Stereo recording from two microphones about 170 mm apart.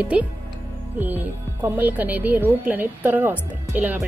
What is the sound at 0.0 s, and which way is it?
Speech, 5° right (ahead or behind).